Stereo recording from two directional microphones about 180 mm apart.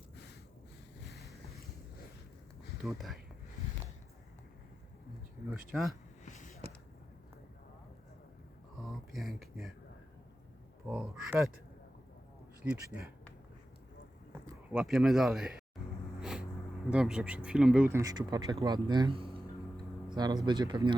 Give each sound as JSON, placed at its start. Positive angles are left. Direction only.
{"t": 1.1, "sound": "boat", "side_deg": 0}
{"t": 2.8, "sound": "speech", "side_deg": 0}
{"t": 8.8, "sound": "a sound", "side_deg": 0}
{"t": 10.8, "sound": "a sound", "side_deg": -5}
{"t": 12.6, "sound": "speech", "side_deg": -5}
{"t": 14.7, "sound": "speech", "side_deg": -5}
{"t": 16.2, "sound": "a sound", "side_deg": -5}
{"t": 16.9, "sound": "speech", "side_deg": -5}
{"t": 17.9, "sound": "speech", "side_deg": -20}